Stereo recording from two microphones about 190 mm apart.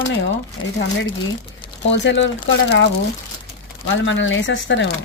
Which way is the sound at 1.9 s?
75° left (ahead or behind).